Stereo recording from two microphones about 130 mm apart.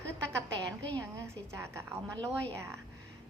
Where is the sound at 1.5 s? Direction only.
20° right (ahead or behind).